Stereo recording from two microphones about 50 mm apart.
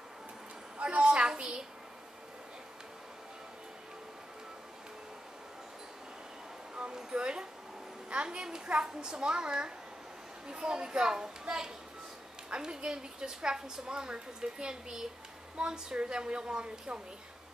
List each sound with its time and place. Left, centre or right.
0.7 s a sound: right
6.7 s music: centre
8.1 s a woman's voice: centre